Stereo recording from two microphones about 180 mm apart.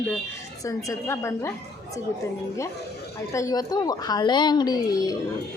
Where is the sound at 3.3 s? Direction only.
20° left (ahead or behind).